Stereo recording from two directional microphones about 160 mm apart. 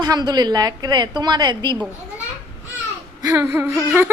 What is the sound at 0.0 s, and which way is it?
A woman's voice, 25° right (ahead or behind).